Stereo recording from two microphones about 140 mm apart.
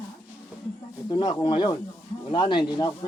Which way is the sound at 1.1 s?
30° left (ahead or behind).